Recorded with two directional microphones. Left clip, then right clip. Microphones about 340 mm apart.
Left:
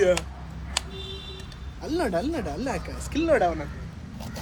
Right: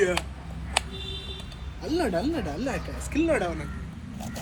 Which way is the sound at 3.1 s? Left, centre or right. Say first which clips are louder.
Left 3 dB; left.